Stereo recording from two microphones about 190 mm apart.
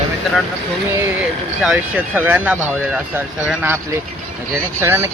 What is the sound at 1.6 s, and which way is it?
Speech, 5° right (ahead or behind).